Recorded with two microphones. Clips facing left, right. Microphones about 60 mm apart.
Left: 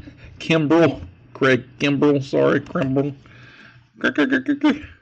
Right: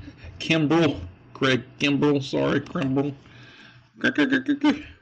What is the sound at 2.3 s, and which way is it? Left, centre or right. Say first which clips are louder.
Speech: left 7 dB; left.